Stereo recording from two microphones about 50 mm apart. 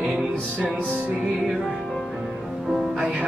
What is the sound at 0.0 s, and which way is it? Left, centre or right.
Music, centre.